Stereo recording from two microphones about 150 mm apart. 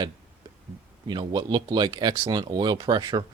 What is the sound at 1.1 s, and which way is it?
Speech, 30° right (ahead or behind).